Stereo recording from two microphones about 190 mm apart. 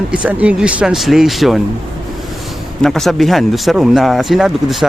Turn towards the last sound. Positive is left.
turn(degrees=0)  # may be behind; listen again after turning